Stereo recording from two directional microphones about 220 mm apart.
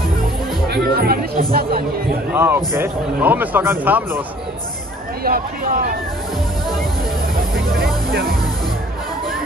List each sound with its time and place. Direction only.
0.7 s speech: 45° right (ahead or behind)
2.3 s a man's voice: 10° right (ahead or behind)
5.2 s speech: 45° right (ahead or behind)
7.8 s music: 45° right (ahead or behind)